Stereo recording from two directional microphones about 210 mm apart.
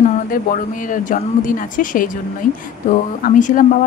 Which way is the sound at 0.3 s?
40° left (ahead or behind).